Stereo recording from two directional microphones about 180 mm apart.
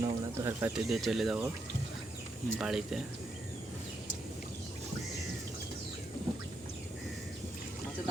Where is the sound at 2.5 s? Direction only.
5° right (ahead or behind).